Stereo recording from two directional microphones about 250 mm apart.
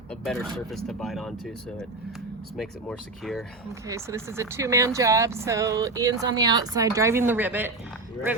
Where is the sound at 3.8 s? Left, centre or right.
Centre.